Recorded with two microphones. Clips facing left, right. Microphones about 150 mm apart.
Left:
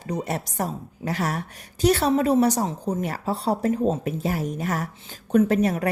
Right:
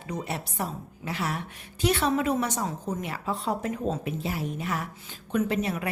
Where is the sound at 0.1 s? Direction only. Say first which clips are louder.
Left 5 dB; 40° left (ahead or behind).